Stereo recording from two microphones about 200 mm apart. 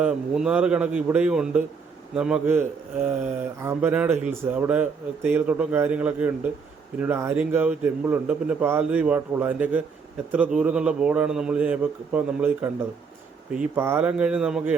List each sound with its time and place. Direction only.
0.0 s a man's voice: 5° right (ahead or behind)